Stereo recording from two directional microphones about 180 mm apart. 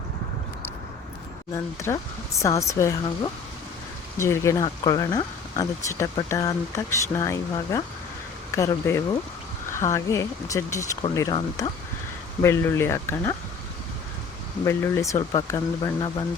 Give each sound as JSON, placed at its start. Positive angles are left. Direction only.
{"t": 1.5, "sound": "speech", "side_deg": 15}
{"t": 4.2, "sound": "speech", "side_deg": 15}
{"t": 12.4, "sound": "speech", "side_deg": 15}
{"t": 14.6, "sound": "speech", "side_deg": 15}